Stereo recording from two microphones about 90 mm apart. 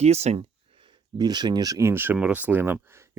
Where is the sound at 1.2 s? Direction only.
50° right (ahead or behind); by 2.1 s 25° right (ahead or behind).